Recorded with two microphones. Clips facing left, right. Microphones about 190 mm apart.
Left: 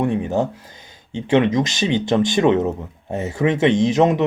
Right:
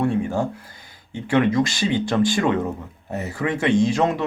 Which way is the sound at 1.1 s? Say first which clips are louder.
Left 2 dB; 20° left (ahead or behind).